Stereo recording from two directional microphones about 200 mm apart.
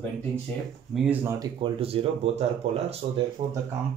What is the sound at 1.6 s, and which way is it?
Speech, 30° right (ahead or behind).